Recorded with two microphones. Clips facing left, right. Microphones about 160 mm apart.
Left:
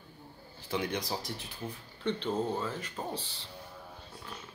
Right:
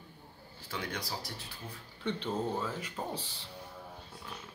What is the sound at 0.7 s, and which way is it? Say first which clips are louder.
Speech: left 6 dB; 20° left (ahead or behind).